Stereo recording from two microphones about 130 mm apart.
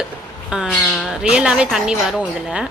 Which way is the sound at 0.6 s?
5° left (ahead or behind).